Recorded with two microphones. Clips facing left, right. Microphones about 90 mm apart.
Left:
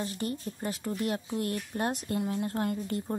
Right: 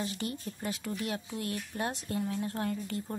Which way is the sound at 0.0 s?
40° left (ahead or behind).